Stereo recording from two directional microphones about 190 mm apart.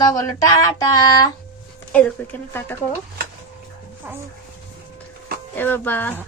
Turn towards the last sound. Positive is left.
turn(degrees=10)  # may be behind; listen again after turning